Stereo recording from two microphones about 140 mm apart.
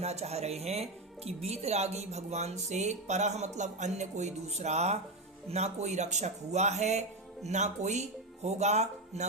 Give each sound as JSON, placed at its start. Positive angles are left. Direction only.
{"t": 0.0, "sound": "speech", "side_deg": -50}